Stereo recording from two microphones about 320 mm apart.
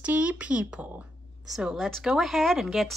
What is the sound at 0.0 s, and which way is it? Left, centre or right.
A woman's voice, centre.